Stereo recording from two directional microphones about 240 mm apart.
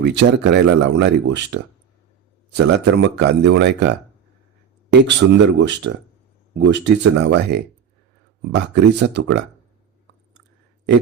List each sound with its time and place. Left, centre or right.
0.0 s speech: right
2.6 s speech: right